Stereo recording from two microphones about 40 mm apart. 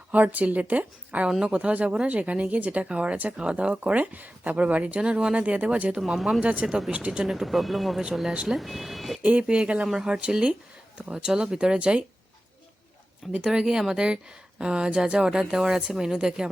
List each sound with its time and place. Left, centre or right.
0.1 s speech: right
3.8 s speech: right
4.9 s speech: right
6.0 s speech: centre
6.4 s speech: right
6.7 s speech: centre
6.9 s speech: right
7.3 s speech: centre
9.4 s speech: right
9.8 s speech: centre
10.1 s speech: right
13.4 s speech: centre